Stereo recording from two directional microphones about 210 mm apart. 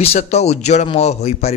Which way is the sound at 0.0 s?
30° left (ahead or behind).